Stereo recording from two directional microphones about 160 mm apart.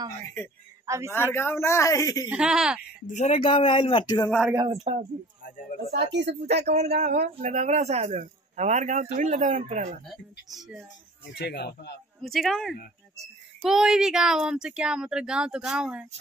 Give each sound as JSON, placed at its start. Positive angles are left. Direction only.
{"t": 0.8, "sound": "a man's voice", "side_deg": -20}
{"t": 1.1, "sound": "speech", "side_deg": 15}
{"t": 2.2, "sound": "speech", "side_deg": -5}
{"t": 3.2, "sound": "speech", "side_deg": 35}
{"t": 4.3, "sound": "speech", "side_deg": 0}
{"t": 4.6, "sound": "speech", "side_deg": -40}
{"t": 5.9, "sound": "speech", "side_deg": -90}
{"t": 6.6, "sound": "speech", "side_deg": -45}
{"t": 10.0, "sound": "speech", "side_deg": 0}
{"t": 11.3, "sound": "speech", "side_deg": 90}
{"t": 12.2, "sound": "speech", "side_deg": 0}